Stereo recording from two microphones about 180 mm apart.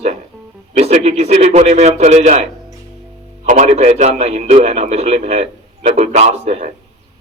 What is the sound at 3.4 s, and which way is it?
A man's voice, 40° right (ahead or behind).